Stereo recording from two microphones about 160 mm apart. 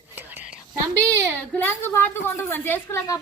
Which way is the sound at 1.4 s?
10° left (ahead or behind).